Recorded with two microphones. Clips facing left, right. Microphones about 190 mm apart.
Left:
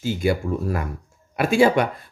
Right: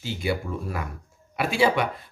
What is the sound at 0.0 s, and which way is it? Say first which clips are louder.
Speech: left 6 dB; 50° left (ahead or behind).